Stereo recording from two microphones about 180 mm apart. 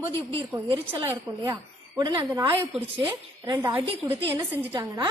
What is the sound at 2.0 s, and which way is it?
A woman's voice, 20° right (ahead or behind).